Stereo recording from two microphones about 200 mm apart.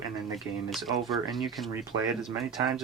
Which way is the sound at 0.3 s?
Centre (ahead or behind).